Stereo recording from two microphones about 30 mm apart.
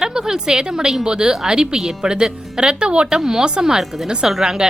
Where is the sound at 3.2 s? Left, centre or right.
Right.